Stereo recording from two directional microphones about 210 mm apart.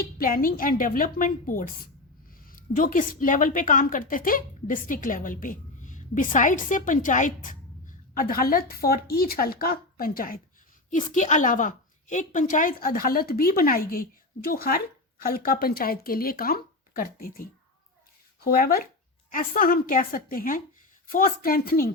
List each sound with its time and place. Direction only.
0.0 s a woman's voice: 45° left (ahead or behind)